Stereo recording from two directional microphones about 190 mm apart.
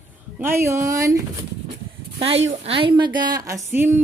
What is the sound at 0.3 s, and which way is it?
Speech, 10° right (ahead or behind).